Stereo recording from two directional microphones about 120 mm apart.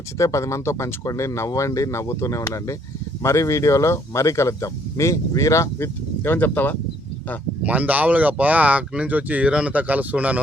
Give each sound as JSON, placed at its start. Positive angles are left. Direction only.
{"t": 0.2, "sound": "speech", "side_deg": 25}
{"t": 7.6, "sound": "speech", "side_deg": -10}